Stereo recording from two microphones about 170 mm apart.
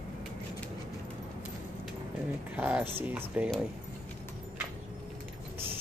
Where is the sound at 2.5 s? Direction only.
10° right (ahead or behind).